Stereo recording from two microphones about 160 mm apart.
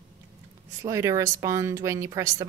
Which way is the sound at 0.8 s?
20° right (ahead or behind).